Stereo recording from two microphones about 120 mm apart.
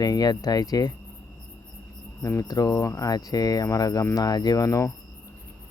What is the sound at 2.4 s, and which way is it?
Cricket, 30° left (ahead or behind).